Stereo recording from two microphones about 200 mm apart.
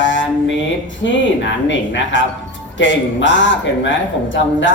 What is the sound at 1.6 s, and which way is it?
Mantra, 65° left (ahead or behind).